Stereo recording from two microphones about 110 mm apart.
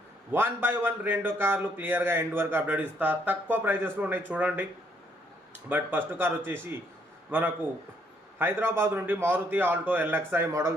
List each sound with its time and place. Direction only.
0.3 s speech: 20° right (ahead or behind)
5.6 s a man's voice: 20° right (ahead or behind)